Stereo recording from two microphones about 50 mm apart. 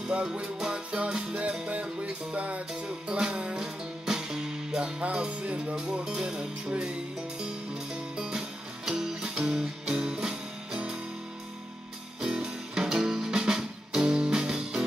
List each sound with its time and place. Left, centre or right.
0.1 s music: right
3.5 s music: centre
12.2 s music: centre